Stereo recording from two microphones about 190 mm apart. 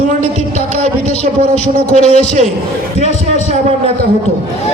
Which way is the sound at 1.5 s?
35° left (ahead or behind).